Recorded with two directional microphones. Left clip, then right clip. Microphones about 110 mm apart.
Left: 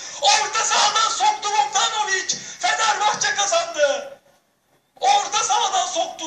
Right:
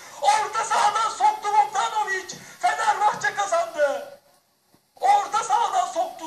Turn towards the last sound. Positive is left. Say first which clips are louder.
# left 2 dB
turn(degrees=5)  # may be behind; listen again after turning